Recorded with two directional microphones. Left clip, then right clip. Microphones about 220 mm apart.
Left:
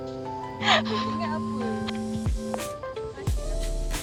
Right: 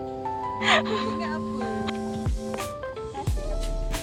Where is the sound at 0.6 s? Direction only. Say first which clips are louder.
Even; 10° left (ahead or behind).